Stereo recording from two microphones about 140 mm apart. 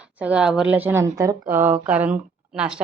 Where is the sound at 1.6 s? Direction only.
10° right (ahead or behind).